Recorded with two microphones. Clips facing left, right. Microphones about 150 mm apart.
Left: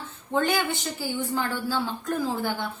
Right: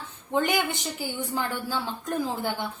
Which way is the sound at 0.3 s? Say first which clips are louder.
Left 1 dB; 15° right (ahead or behind).